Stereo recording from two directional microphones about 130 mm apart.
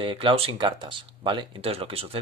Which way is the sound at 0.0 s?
40° right (ahead or behind).